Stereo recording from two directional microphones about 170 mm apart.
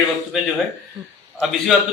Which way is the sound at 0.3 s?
Centre (ahead or behind).